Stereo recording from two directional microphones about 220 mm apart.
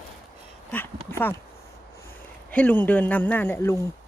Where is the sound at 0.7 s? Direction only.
10° left (ahead or behind).